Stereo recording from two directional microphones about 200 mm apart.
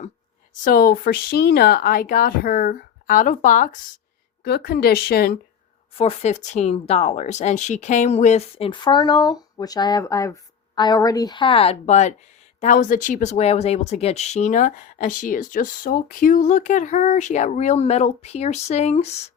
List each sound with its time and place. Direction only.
0.6 s speech: 50° left (ahead or behind)
4.4 s speech: 50° left (ahead or behind)
5.9 s speech: 30° left (ahead or behind)